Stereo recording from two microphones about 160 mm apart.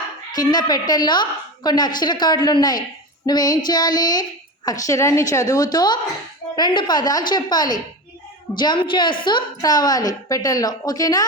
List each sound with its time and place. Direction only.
0.3 s a woman's voice: 25° left (ahead or behind)